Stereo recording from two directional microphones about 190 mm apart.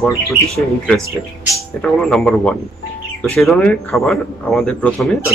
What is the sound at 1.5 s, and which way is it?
A man's voice, 5° left (ahead or behind).